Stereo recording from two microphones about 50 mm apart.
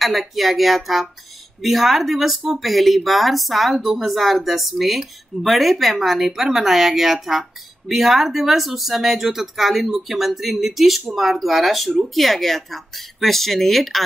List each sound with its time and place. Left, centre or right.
0.0 s speech: centre